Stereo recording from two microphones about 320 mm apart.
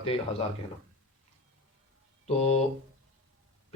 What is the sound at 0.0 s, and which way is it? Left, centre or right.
Speech, centre.